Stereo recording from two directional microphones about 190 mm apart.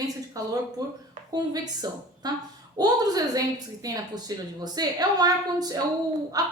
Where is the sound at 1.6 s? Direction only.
20° right (ahead or behind).